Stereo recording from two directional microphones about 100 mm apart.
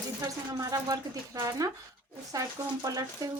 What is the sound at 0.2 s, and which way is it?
Speech, 35° right (ahead or behind).